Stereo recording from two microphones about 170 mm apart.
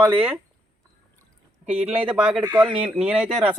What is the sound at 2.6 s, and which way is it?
Speech, 30° right (ahead or behind).